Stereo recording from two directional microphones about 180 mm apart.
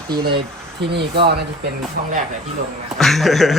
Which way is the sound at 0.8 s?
65° right (ahead or behind).